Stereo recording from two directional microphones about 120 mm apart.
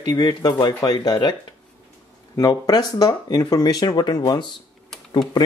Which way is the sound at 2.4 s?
35° left (ahead or behind).